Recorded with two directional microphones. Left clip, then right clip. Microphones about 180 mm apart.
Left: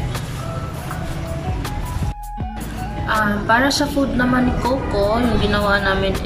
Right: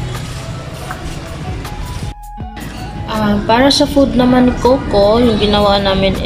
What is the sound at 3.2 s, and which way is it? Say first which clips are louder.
A woman's voice: right 8 dB; 20° right (ahead or behind).